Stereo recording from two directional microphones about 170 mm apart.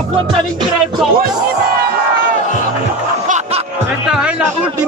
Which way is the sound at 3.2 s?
45° right (ahead or behind).